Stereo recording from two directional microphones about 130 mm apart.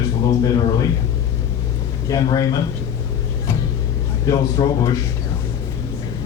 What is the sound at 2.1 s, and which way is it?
Speech, 30° left (ahead or behind).